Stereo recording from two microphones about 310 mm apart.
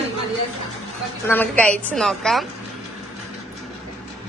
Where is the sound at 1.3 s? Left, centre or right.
Centre.